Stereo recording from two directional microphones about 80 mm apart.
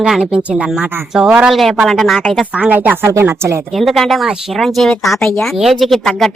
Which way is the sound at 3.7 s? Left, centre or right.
Centre.